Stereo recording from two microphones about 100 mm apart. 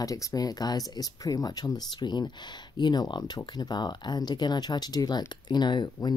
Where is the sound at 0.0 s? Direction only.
35° left (ahead or behind).